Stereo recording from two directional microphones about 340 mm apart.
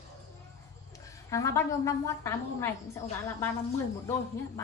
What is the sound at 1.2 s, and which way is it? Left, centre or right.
Speech, centre.